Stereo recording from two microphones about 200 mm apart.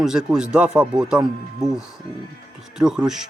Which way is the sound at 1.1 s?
20° right (ahead or behind).